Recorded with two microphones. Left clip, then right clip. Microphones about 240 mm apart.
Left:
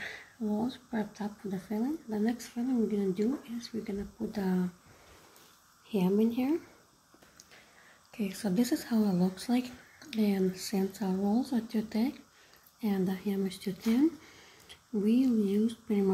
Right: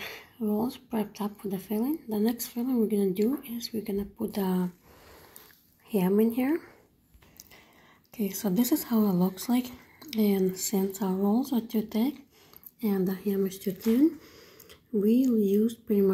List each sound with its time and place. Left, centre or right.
0.0 s a sound: centre
0.8 s speech: centre
5.9 s speech: centre
8.1 s speech: centre